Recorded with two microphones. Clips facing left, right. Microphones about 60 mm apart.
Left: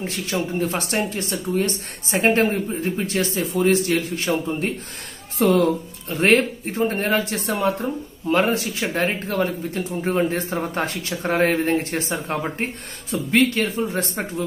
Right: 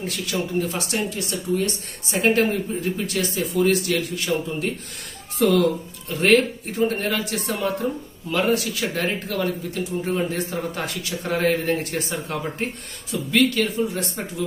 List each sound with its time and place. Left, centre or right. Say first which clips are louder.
0.0 s speech: left 1 dB; left